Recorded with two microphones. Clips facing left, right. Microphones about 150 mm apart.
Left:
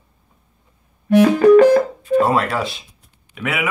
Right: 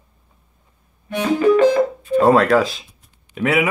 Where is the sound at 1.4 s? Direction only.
45° left (ahead or behind).